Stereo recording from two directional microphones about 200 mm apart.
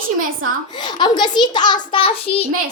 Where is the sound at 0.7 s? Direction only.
20° left (ahead or behind).